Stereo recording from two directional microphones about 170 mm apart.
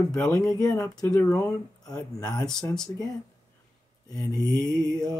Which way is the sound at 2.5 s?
5° left (ahead or behind).